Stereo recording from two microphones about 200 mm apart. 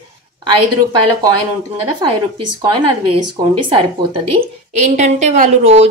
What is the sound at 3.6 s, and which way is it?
A woman's voice, 25° right (ahead or behind).